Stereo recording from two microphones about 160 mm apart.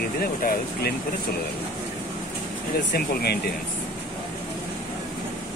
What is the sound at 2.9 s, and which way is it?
Speech, 75° left (ahead or behind).